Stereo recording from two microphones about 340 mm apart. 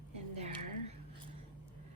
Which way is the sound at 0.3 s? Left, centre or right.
Centre.